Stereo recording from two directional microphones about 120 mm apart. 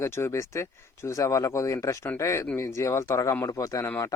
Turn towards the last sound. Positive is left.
turn(degrees=25)  # may be behind; listen again after turning